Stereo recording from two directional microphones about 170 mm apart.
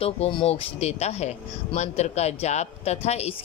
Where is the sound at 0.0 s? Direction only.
35° left (ahead or behind).